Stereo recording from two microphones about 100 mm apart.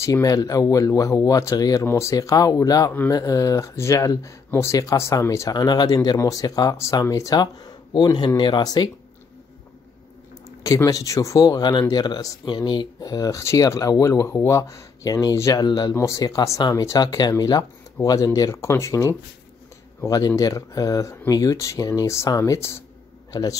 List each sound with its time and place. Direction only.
0.0 s speech: 35° left (ahead or behind)
10.6 s speech: 35° left (ahead or behind)
15.9 s speech: 30° left (ahead or behind)
23.3 s speech: 40° left (ahead or behind)